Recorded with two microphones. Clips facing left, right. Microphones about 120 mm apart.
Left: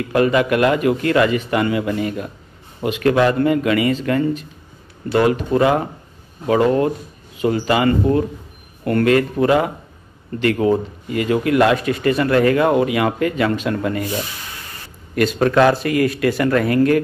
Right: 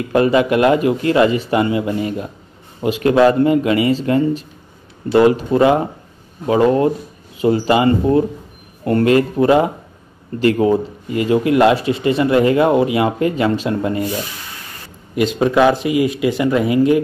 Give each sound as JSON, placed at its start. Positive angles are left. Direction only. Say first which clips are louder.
{"t": 0.1, "sound": "speech", "louder": "right 2 dB", "side_deg": -25}
{"t": 15.1, "sound": "speech", "louder": "right 1 dB", "side_deg": -15}